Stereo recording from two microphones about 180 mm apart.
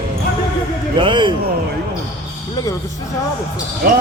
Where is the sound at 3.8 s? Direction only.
55° right (ahead or behind).